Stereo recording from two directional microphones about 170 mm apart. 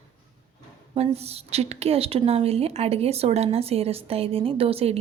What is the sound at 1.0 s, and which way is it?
A woman's voice, 40° right (ahead or behind).